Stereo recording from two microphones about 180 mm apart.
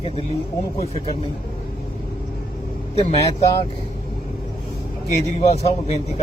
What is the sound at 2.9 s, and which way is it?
Speech, 35° left (ahead or behind).